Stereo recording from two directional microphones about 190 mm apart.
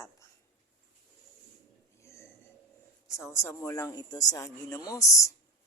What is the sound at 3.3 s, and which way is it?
A man's voice, 15° left (ahead or behind).